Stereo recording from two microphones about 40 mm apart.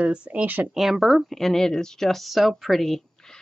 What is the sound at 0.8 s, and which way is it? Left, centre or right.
Speech, centre.